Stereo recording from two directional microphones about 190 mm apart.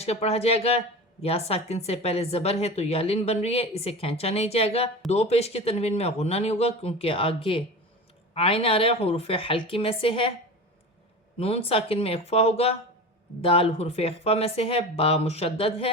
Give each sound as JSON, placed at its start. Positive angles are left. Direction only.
{"t": 0.0, "sound": "a woman's voice", "side_deg": 35}
{"t": 11.3, "sound": "a woman's voice", "side_deg": 30}